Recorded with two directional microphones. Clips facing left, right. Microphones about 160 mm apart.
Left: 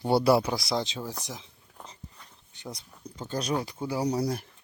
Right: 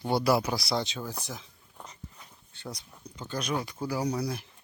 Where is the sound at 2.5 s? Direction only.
15° left (ahead or behind).